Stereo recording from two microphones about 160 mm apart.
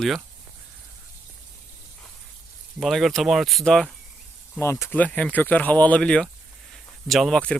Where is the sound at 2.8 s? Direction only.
Centre (ahead or behind).